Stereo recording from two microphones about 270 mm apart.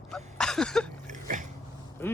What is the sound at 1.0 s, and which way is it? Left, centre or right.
Dog, right.